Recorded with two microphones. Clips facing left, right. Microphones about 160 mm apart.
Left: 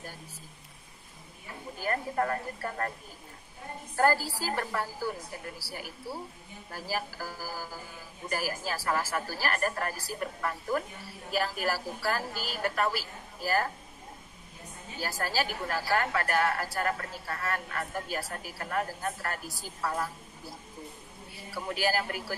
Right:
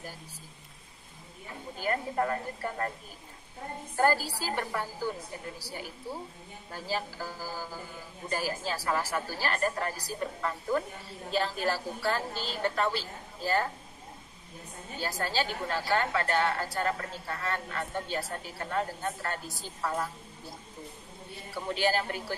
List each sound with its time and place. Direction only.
1.8 s a woman's voice: 20° right (ahead or behind)
3.9 s a woman's voice: 20° right (ahead or behind)
15.0 s a woman's voice: 25° right (ahead or behind)
21.6 s a woman's voice: 25° right (ahead or behind)